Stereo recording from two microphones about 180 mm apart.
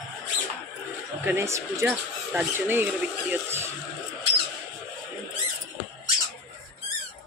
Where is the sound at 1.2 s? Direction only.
15° right (ahead or behind).